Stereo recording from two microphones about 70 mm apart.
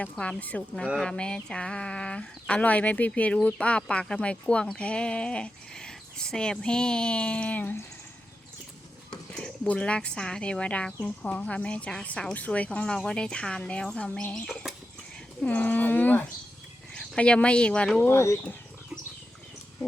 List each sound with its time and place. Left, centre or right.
0.0 s speech: centre
9.6 s speech: centre
15.4 s speech: left
18.0 s speech: left